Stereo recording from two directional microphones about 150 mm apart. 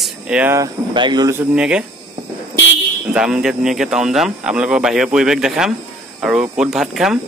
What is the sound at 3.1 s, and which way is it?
Speech, 5° right (ahead or behind).